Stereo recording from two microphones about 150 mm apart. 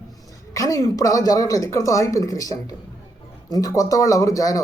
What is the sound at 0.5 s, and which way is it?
A woman's voice, 25° left (ahead or behind).